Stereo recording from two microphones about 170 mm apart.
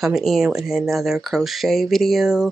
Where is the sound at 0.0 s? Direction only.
Centre (ahead or behind).